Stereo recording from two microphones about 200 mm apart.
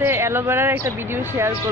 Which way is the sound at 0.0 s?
10° right (ahead or behind).